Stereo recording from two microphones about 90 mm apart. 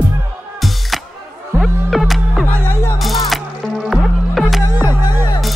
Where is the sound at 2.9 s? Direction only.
Centre (ahead or behind).